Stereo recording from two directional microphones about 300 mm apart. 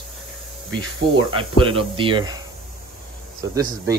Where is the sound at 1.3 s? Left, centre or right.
Centre.